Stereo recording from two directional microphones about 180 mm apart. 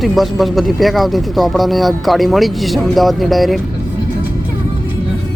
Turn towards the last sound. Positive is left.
turn(degrees=0)  # may be behind; listen again after turning